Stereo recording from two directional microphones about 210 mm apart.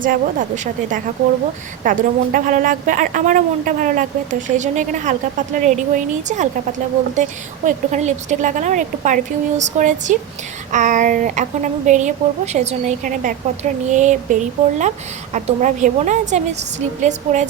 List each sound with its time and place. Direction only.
0.0 s a woman's voice: 40° right (ahead or behind)